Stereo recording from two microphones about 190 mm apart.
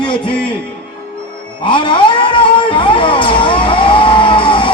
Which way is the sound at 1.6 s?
25° left (ahead or behind).